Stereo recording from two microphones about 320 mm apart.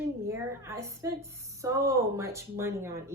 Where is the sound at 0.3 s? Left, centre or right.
Centre.